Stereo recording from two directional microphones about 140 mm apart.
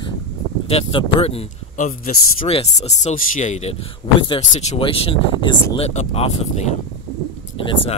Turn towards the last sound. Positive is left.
turn(degrees=40)  # may be behind; listen again after turning